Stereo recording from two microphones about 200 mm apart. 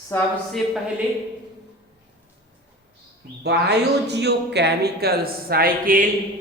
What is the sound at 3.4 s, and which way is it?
Speech, 55° right (ahead or behind).